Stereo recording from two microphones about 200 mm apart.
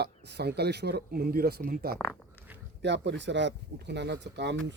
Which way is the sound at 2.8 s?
60° right (ahead or behind).